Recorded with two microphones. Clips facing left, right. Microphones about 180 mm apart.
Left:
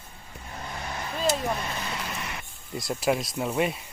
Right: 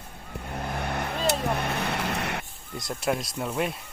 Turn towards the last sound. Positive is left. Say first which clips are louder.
# left 2 dB
turn(degrees=0)  # may be behind; listen again after turning